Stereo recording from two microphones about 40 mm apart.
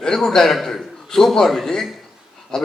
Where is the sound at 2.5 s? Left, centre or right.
Centre.